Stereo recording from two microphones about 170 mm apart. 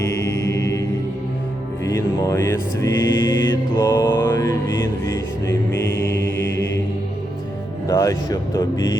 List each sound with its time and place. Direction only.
0.0 s mantra: 15° left (ahead or behind)
1.9 s music: 15° left (ahead or behind)
5.5 s mantra: 90° left
7.9 s music: 20° left (ahead or behind)